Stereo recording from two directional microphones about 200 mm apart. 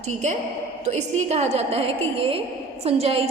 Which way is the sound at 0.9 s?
35° right (ahead or behind).